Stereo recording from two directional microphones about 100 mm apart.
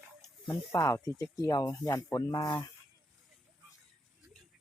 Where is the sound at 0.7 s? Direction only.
30° left (ahead or behind).